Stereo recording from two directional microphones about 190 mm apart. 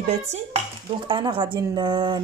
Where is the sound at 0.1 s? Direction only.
35° right (ahead or behind).